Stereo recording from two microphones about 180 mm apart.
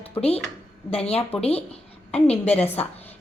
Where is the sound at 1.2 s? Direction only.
10° left (ahead or behind).